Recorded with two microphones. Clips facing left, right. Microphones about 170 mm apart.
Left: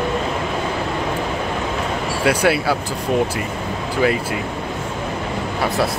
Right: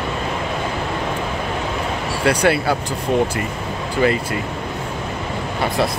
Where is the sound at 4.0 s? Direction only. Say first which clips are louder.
Right 1 dB; 5° left (ahead or behind).